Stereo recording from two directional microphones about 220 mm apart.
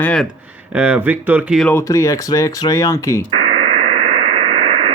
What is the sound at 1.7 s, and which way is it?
Speech, 15° left (ahead or behind).